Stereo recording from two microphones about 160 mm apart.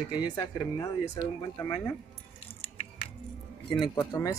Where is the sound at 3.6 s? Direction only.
30° left (ahead or behind).